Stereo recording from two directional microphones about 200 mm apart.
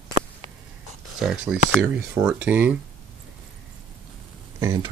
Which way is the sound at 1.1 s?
5° right (ahead or behind).